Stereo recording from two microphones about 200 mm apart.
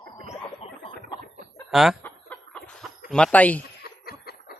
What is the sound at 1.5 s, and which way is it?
Chicken, centre (ahead or behind).